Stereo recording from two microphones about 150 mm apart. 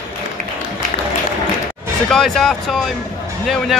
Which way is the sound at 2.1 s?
5° left (ahead or behind).